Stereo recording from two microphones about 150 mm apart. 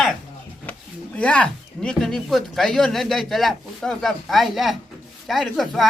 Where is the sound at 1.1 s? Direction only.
5° left (ahead or behind).